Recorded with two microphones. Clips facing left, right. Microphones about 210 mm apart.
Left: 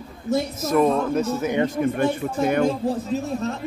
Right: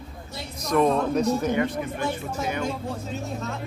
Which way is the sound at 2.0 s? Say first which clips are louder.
Left 7 dB; 55° left (ahead or behind).